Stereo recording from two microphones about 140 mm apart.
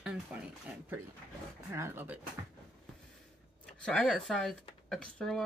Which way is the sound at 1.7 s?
15° right (ahead or behind).